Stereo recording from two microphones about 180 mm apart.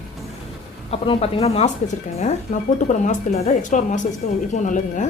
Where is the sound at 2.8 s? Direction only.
45° left (ahead or behind).